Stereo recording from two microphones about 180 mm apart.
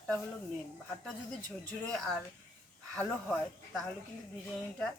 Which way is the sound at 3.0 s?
5° left (ahead or behind).